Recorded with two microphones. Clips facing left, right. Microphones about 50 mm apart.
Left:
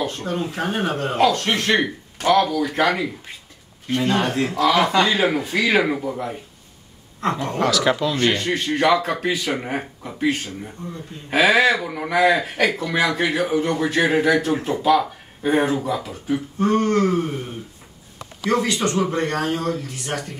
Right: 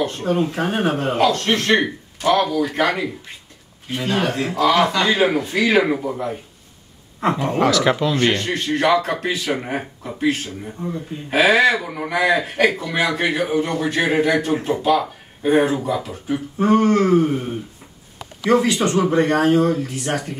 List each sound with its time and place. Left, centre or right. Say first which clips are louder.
0.2 s speech: right 5 dB; centre
1.1 s speech: left 1 dB; centre; by 17.5 s right
18.7 s speech: right 3 dB; centre